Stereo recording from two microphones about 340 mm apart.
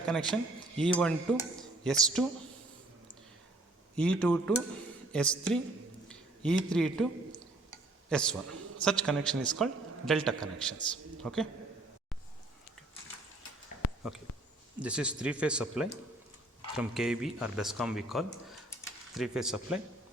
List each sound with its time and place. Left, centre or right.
0.0 s speech: centre
3.9 s speech: centre
6.1 s a sound: centre
8.8 s a man's voice: centre
13.8 s a sound: left
14.8 s speech: centre